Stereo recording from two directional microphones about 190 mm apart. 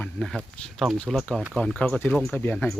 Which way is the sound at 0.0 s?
5° left (ahead or behind).